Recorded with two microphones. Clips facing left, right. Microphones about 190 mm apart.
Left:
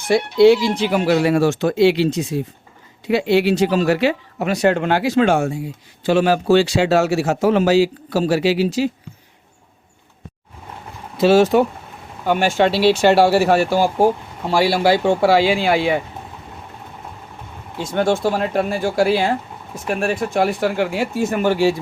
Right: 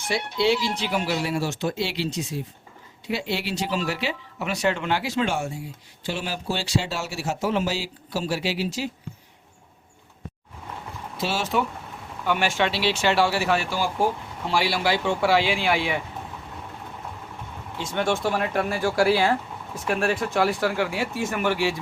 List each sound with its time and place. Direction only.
0.1 s speech: 50° left (ahead or behind)
6.1 s speech: 60° left (ahead or behind); by 8.9 s 90° left
11.3 s speech: 45° left (ahead or behind)
17.7 s speech: 35° left (ahead or behind)
21.2 s speech: 35° left (ahead or behind)